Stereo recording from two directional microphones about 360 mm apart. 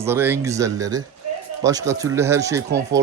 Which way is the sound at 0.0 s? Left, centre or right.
Centre.